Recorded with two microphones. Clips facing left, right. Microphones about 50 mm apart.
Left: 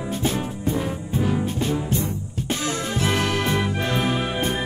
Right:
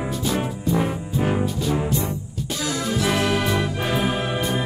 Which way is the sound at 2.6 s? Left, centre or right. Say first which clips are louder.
Right 3 dB; left.